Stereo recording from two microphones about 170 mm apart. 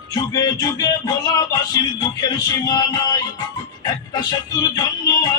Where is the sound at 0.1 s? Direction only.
20° left (ahead or behind).